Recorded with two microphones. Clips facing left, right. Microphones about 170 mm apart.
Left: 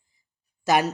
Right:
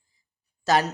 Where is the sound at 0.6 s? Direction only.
10° left (ahead or behind).